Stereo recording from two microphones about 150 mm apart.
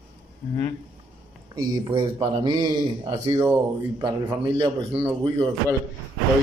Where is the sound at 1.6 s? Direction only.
25° right (ahead or behind).